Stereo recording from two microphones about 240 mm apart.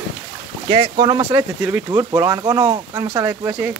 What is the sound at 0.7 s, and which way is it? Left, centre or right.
Speech, centre.